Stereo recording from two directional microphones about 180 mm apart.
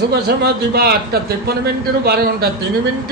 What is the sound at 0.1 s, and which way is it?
A man's voice, 65° right (ahead or behind).